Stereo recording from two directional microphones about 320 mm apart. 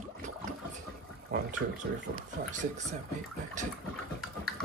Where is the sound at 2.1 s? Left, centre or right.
Right.